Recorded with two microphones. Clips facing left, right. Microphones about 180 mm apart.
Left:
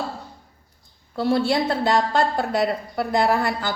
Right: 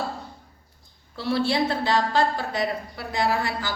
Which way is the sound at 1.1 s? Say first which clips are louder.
Left 4 dB; 50° left (ahead or behind).